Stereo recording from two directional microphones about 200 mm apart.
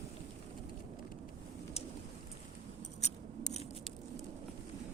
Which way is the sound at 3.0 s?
35° left (ahead or behind).